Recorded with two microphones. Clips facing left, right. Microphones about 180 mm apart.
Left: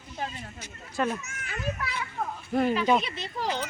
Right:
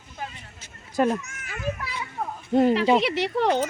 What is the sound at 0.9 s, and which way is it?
Speech, 40° right (ahead or behind).